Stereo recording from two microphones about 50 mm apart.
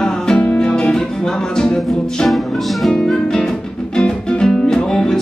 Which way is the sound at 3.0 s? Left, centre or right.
Centre.